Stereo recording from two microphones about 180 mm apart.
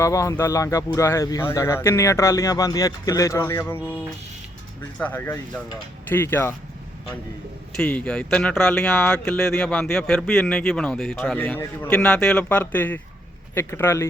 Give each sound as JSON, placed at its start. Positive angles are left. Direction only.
{"t": 0.0, "sound": "speech", "side_deg": 15}
{"t": 4.9, "sound": "speech", "side_deg": 10}
{"t": 7.8, "sound": "speech", "side_deg": 5}